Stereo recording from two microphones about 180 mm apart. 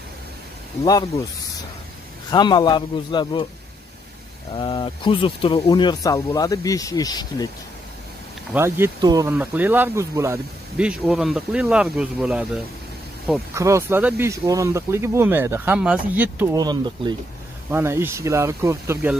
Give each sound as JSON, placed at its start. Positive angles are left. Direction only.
{"t": 2.3, "sound": "speech", "side_deg": 25}
{"t": 4.6, "sound": "speech", "side_deg": 25}
{"t": 8.5, "sound": "speech", "side_deg": -15}
{"t": 9.3, "sound": "speech", "side_deg": -10}
{"t": 10.9, "sound": "speech", "side_deg": -5}
{"t": 13.6, "sound": "speech", "side_deg": -15}
{"t": 16.5, "sound": "speech", "side_deg": -25}
{"t": 17.6, "sound": "speech", "side_deg": -15}